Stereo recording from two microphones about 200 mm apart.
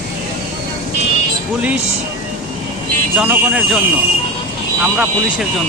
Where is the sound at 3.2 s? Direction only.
5° right (ahead or behind).